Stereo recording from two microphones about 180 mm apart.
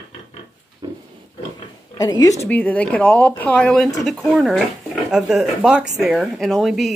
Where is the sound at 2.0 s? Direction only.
20° left (ahead or behind).